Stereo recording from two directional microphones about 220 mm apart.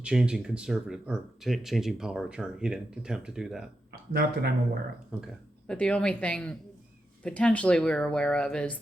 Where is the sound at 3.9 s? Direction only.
45° right (ahead or behind).